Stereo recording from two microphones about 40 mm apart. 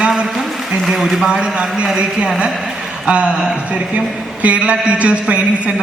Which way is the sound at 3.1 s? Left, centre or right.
Right.